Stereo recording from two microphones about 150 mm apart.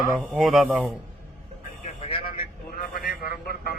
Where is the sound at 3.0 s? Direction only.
85° left.